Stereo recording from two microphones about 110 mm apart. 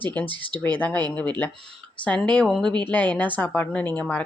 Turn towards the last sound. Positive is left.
turn(degrees=10)  # may be behind; listen again after turning